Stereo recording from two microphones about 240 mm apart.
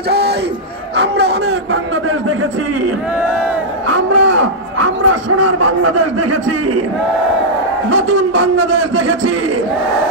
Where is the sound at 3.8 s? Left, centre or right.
Right.